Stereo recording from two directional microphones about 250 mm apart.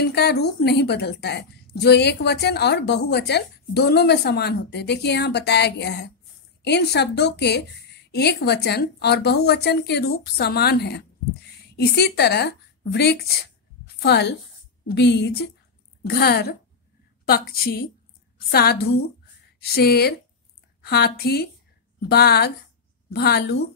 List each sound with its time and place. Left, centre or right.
0.0 s a woman's voice: left